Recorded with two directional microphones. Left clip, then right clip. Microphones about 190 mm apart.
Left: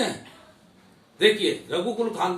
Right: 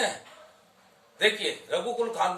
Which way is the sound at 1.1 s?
15° right (ahead or behind).